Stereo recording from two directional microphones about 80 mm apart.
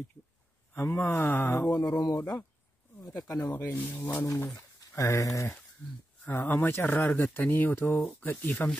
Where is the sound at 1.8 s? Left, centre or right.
Left.